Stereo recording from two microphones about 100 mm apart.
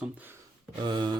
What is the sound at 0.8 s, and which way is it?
Speech, 50° right (ahead or behind).